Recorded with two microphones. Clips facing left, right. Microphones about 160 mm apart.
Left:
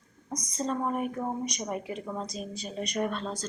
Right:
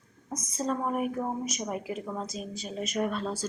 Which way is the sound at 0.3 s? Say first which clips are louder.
Right 1 dB; 5° right (ahead or behind).